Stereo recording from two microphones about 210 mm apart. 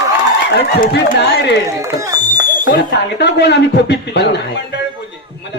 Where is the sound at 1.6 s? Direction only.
15° right (ahead or behind).